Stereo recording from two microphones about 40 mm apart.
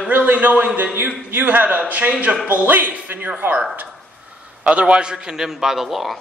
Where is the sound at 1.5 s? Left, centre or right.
Right.